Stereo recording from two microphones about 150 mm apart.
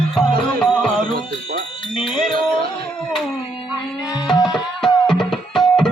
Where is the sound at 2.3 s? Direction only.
90° right.